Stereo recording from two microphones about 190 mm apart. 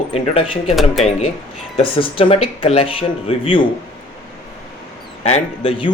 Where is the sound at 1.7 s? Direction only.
30° left (ahead or behind).